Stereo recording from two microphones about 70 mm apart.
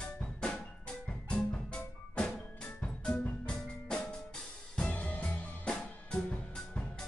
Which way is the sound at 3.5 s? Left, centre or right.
Centre.